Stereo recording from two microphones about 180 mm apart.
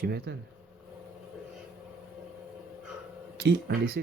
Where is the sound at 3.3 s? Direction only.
65° right (ahead or behind).